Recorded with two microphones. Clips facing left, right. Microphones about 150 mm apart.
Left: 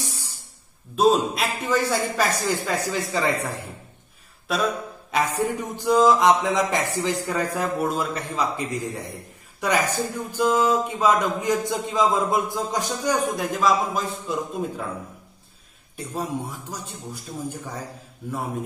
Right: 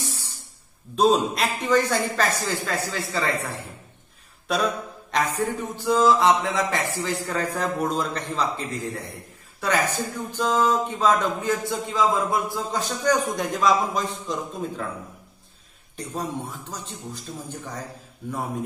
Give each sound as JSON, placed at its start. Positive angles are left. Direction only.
{"t": 0.9, "sound": "a man's voice", "side_deg": 0}
{"t": 4.5, "sound": "a man's voice", "side_deg": 0}
{"t": 5.1, "sound": "a man's voice", "side_deg": 15}
{"t": 13.5, "sound": "a man's voice", "side_deg": 0}
{"t": 16.2, "sound": "a man's voice", "side_deg": 10}